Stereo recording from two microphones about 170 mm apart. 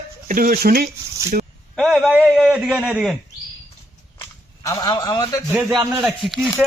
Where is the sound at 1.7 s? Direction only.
Centre (ahead or behind).